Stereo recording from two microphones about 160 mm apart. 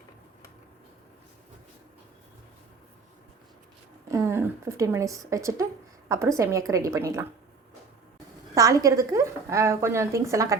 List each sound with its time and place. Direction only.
4.1 s speech: 15° right (ahead or behind)
8.5 s speech: 20° right (ahead or behind)